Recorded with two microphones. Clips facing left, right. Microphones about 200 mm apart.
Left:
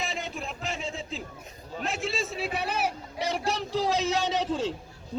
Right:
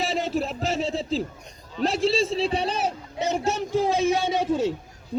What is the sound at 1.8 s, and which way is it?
Speech, 35° right (ahead or behind).